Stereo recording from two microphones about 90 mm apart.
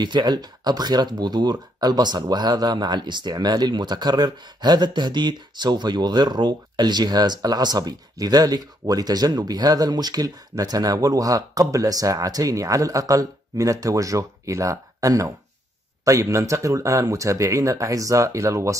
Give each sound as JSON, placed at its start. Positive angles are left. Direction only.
{"t": 0.0, "sound": "speech", "side_deg": -55}